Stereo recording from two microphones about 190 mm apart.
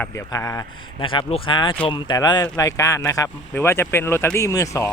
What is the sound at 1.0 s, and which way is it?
Speech, 25° left (ahead or behind).